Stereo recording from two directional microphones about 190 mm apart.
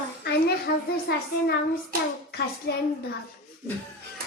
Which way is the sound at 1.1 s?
55° left (ahead or behind).